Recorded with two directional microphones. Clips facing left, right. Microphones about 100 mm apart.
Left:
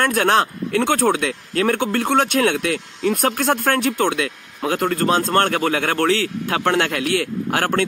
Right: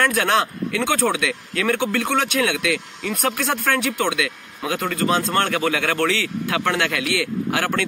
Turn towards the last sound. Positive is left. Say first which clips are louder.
# left 2 dB
turn(degrees=40)  # may be behind; listen again after turning